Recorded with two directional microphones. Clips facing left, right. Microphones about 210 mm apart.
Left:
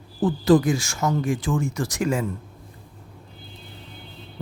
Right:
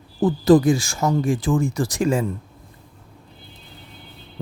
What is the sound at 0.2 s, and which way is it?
Speech, 35° right (ahead or behind).